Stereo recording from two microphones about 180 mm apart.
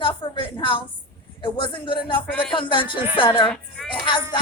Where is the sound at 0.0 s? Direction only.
30° left (ahead or behind).